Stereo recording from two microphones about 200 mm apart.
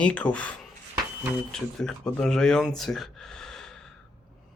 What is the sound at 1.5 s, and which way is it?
Speech, 5° left (ahead or behind).